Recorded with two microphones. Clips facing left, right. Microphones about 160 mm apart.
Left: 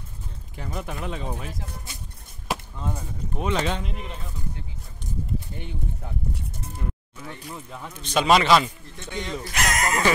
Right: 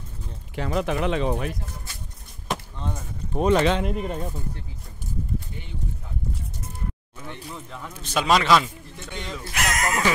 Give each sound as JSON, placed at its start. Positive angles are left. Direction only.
{"t": 0.6, "sound": "speech", "side_deg": -90}
{"t": 2.5, "sound": "a sound", "side_deg": 5}
{"t": 3.5, "sound": "speech", "side_deg": -85}
{"t": 3.8, "sound": "speech", "side_deg": -50}
{"t": 7.2, "sound": "speech", "side_deg": 10}
{"t": 7.9, "sound": "speech", "side_deg": -5}